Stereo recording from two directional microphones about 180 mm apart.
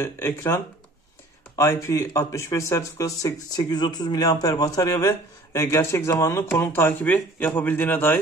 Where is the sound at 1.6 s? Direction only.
15° left (ahead or behind).